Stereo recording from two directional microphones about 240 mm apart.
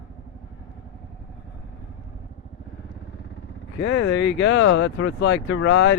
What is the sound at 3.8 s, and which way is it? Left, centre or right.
Speech, left.